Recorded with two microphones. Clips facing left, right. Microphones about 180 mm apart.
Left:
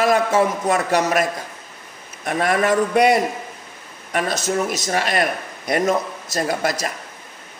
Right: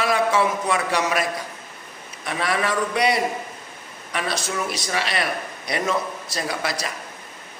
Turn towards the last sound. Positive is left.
turn(degrees=45)  # may be behind; listen again after turning